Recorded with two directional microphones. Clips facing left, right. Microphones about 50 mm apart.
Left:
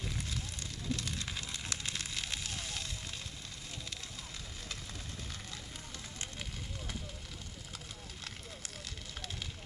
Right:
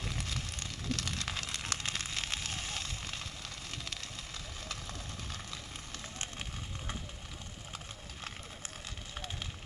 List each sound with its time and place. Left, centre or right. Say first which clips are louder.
0.2 s fire: right 2 dB; right